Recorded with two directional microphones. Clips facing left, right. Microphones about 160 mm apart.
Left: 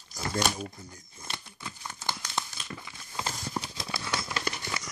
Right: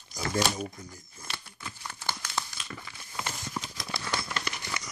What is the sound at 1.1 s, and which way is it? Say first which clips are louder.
Crumpling: left 2 dB; 20° left (ahead or behind).